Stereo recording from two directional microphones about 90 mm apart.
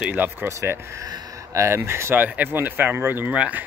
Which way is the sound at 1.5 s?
30° right (ahead or behind).